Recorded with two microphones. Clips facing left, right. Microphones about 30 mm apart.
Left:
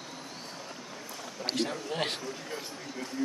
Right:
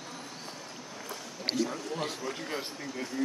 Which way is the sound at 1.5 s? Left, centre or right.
Left.